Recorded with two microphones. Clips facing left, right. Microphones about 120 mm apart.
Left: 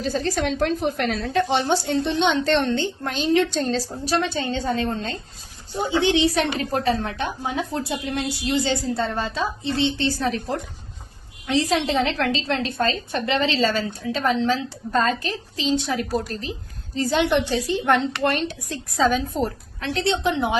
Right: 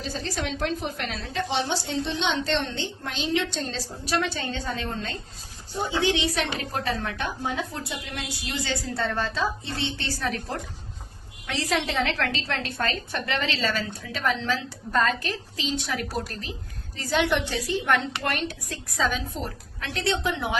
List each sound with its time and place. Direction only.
0.0 s a woman's voice: 45° left (ahead or behind); by 10.4 s 25° left (ahead or behind)
11.4 s a woman's voice: 20° left (ahead or behind)
19.3 s a woman's voice: 45° left (ahead or behind)
19.8 s a woman's voice: 30° left (ahead or behind)